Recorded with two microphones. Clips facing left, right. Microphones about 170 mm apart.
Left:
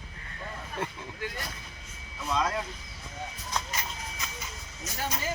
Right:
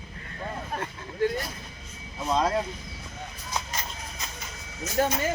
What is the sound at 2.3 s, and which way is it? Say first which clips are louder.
Speech: right 4 dB; 35° right (ahead or behind).